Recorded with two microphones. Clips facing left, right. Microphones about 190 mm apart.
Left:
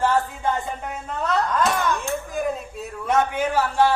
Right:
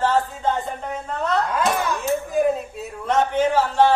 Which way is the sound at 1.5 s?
5° right (ahead or behind).